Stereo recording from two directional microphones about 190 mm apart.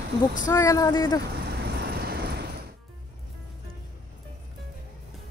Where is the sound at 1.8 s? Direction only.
55° right (ahead or behind).